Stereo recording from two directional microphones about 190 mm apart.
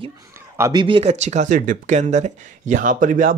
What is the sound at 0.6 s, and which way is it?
Speech, 20° right (ahead or behind).